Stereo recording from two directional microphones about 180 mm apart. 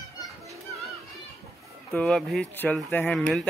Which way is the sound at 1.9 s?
5° left (ahead or behind).